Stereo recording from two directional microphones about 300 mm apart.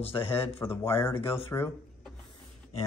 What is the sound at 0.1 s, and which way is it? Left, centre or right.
Speech, centre.